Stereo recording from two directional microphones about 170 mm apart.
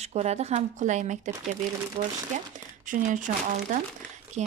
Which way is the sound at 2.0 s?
35° right (ahead or behind).